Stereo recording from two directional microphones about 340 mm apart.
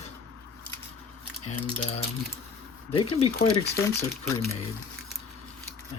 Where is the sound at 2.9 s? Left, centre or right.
Centre.